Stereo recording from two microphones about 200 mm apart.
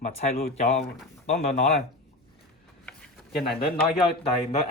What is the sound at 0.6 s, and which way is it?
Speech, 35° left (ahead or behind).